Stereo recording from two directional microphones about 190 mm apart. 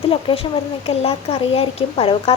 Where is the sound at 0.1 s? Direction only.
30° left (ahead or behind).